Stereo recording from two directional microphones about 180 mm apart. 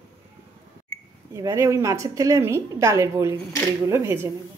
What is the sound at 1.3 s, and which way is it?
A woman's voice, 15° right (ahead or behind).